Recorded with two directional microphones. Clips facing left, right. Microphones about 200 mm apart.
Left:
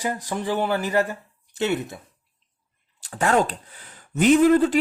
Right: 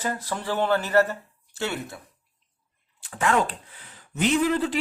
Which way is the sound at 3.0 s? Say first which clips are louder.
Left 3 dB; 35° left (ahead or behind).